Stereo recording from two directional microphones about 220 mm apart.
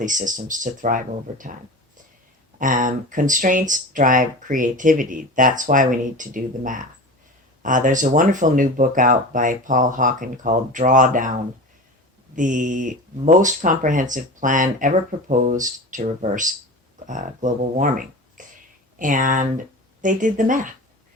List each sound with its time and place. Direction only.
0.0 s speech: 35° right (ahead or behind)
2.6 s speech: 35° right (ahead or behind)
12.4 s speech: 35° right (ahead or behind)